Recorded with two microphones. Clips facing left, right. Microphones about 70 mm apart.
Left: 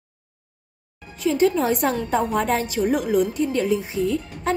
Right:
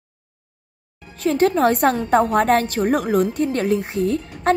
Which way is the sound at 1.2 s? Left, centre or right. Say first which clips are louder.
Right 3 dB; right.